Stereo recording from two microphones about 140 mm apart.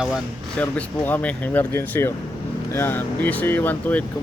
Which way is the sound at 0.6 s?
15° left (ahead or behind).